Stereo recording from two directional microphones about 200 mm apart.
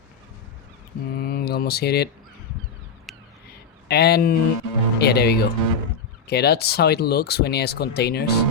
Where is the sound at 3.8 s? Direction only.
55° left (ahead or behind).